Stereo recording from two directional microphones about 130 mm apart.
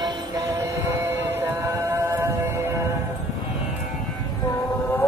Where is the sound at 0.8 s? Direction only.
20° right (ahead or behind).